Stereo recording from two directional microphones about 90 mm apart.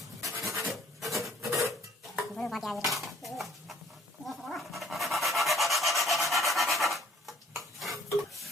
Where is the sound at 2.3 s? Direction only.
5° left (ahead or behind).